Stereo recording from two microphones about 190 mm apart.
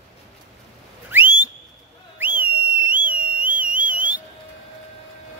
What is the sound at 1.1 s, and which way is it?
Whistle, 10° right (ahead or behind).